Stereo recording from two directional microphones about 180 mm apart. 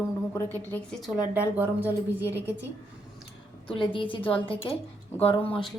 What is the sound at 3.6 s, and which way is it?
A woman's voice, 30° left (ahead or behind).